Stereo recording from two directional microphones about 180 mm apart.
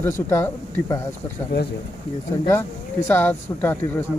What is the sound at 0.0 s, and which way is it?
Speech, 15° left (ahead or behind).